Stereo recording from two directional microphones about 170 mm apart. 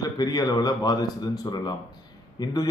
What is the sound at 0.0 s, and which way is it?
Speech, 25° left (ahead or behind).